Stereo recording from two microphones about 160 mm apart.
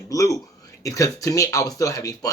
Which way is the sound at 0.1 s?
20° left (ahead or behind).